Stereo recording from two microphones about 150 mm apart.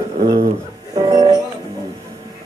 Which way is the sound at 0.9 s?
30° right (ahead or behind).